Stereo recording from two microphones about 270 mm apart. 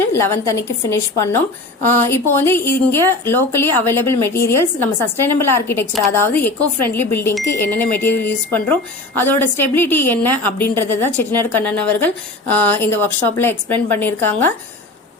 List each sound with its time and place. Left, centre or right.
0.1 s a woman's voice: centre